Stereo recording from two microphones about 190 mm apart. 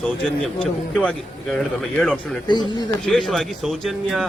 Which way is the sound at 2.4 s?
25° left (ahead or behind).